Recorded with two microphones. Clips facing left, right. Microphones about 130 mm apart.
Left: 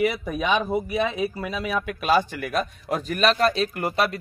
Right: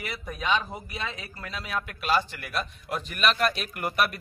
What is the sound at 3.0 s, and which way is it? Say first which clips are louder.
A man's voice: left 5 dB; 40° left (ahead or behind).